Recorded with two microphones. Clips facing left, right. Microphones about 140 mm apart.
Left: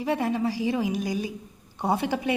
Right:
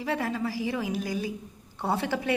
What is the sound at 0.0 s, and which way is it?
A woman's voice, 20° left (ahead or behind).